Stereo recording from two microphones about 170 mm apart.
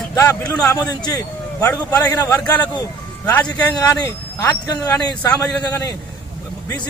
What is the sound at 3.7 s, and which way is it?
Speech, 20° left (ahead or behind).